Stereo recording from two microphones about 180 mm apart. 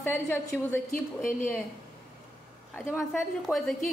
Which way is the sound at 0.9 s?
50° left (ahead or behind).